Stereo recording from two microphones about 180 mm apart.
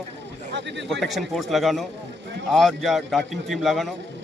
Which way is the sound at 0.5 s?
75° right (ahead or behind).